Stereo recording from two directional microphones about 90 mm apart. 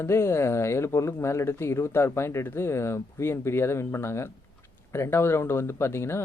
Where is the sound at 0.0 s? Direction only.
30° left (ahead or behind).